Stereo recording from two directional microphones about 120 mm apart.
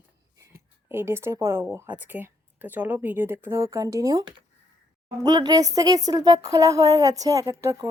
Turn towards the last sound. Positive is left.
turn(degrees=-25)  # may be behind; listen again after turning